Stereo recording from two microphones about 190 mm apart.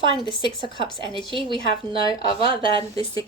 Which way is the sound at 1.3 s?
25° right (ahead or behind).